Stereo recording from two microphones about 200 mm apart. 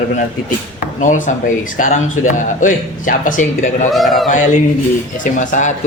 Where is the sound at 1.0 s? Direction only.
40° left (ahead or behind).